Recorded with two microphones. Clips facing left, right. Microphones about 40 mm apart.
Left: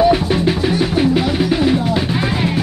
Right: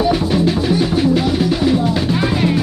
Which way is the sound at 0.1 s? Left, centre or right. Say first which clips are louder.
Even; centre.